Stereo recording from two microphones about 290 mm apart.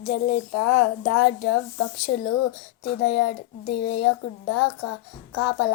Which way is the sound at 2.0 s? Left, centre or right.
Left.